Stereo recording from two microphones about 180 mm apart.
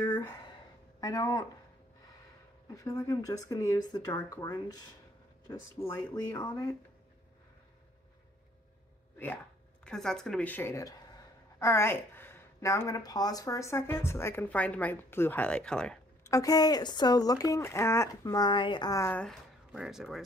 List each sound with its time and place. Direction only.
0.0 s a sound: 15° left (ahead or behind)
1.0 s speech: 20° left (ahead or behind)
2.7 s speech: 20° left (ahead or behind)
9.8 s speech: 5° left (ahead or behind)
16.3 s speech: 20° left (ahead or behind)
19.2 s speech: 5° right (ahead or behind)